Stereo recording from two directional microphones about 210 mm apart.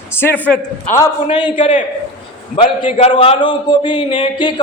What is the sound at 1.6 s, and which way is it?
A man's voice, 35° left (ahead or behind).